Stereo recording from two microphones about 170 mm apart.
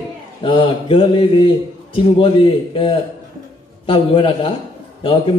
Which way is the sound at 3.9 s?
30° left (ahead or behind).